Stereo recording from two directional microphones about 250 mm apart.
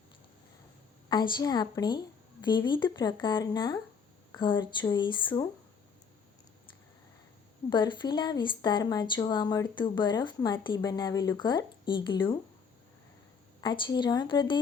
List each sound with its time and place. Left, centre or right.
1.1 s speech: centre
7.7 s speech: centre
13.6 s speech: centre